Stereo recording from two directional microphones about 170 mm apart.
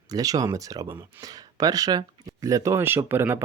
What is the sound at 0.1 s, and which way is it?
Speech, 20° right (ahead or behind).